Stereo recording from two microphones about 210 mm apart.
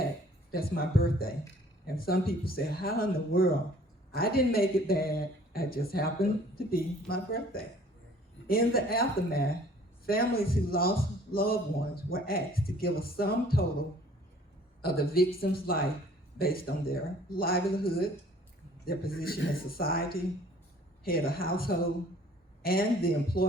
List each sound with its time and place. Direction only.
0.5 s speech: 45° left (ahead or behind)
14.8 s speech: 45° left (ahead or behind)